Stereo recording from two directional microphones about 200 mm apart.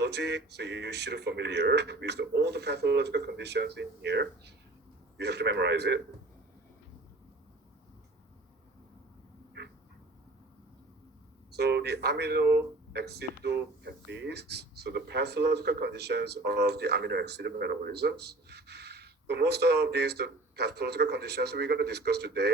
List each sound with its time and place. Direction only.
0.0 s speech: 55° right (ahead or behind)
11.5 s speech: 55° right (ahead or behind)